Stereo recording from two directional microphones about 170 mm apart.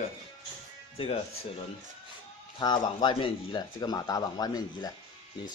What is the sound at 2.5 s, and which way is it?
Speech, 25° left (ahead or behind).